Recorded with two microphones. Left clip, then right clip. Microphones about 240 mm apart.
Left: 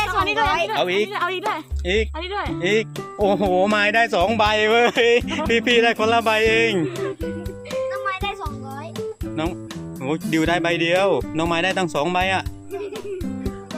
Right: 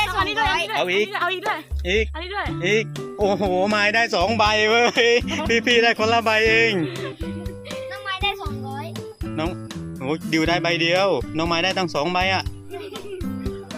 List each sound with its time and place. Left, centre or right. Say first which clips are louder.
0.0 s a woman's voice: left 1 dB; left
0.8 s speech: even; centre
1.1 s speech: even; left
1.9 s speech: even; centre
2.3 s speech: left 2 dB; left
2.6 s speech: even; centre
8.0 s music: right 1 dB; centre
9.0 s music: left 5 dB; centre
10.0 s speech: even; centre